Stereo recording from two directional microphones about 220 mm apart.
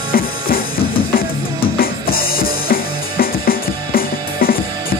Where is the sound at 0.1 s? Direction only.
40° left (ahead or behind).